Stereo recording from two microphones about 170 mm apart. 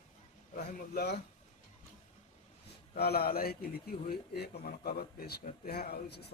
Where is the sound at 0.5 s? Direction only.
70° left (ahead or behind).